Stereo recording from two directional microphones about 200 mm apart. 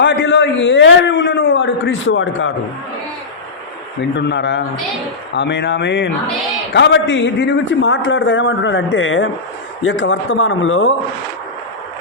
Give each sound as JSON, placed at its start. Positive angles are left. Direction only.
{"t": 0.0, "sound": "a man's voice", "side_deg": 65}
{"t": 4.2, "sound": "a man's voice", "side_deg": 60}